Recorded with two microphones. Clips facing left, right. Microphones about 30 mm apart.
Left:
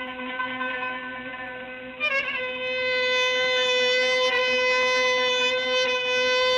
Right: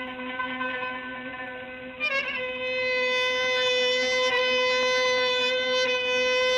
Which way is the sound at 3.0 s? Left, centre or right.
Left.